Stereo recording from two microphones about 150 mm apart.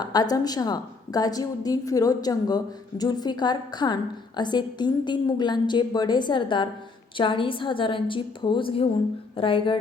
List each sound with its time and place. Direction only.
0.0 s a woman's voice: 25° left (ahead or behind)